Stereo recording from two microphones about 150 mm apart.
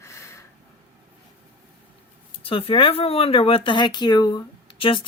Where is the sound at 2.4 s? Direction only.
40° left (ahead or behind).